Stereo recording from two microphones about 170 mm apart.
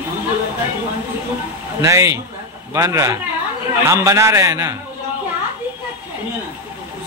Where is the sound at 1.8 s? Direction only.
15° right (ahead or behind).